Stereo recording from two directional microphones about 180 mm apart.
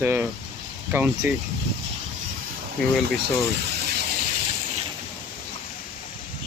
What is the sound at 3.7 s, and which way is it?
Gush, 65° right (ahead or behind).